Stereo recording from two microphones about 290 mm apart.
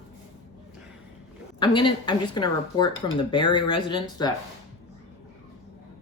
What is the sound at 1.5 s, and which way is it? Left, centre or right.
Speech, centre.